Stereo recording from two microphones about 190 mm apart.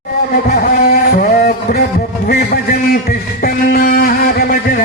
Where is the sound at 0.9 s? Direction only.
50° left (ahead or behind).